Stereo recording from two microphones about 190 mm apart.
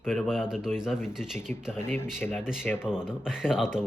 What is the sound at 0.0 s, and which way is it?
Speech, centre (ahead or behind).